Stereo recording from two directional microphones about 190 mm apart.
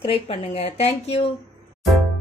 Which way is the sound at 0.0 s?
30° left (ahead or behind).